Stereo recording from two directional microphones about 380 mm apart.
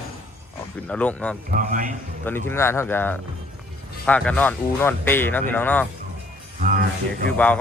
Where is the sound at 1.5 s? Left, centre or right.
Right.